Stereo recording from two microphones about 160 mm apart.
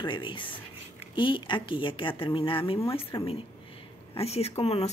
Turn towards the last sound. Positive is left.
turn(degrees=40)  # may be behind; listen again after turning